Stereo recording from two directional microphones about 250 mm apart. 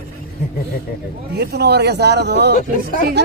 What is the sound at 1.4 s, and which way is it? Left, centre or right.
Speech, right.